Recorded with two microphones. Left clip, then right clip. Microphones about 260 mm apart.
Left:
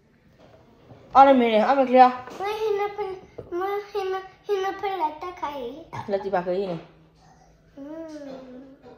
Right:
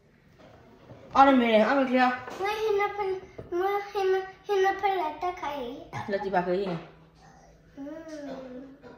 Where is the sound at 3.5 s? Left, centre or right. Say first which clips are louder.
Even; centre.